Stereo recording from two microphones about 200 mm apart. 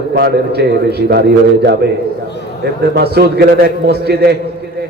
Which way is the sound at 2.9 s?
55° right (ahead or behind).